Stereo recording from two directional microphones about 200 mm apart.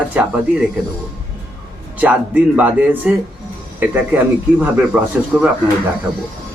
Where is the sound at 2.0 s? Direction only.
10° right (ahead or behind).